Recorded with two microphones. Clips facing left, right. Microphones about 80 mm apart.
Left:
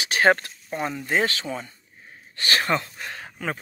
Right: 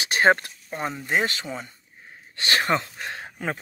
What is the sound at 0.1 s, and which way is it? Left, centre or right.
Speech, right.